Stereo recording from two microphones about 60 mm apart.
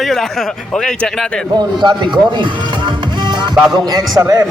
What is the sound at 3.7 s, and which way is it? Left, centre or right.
Speech, right.